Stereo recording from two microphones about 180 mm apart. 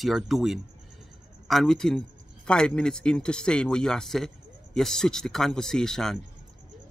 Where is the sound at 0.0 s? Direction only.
Centre (ahead or behind).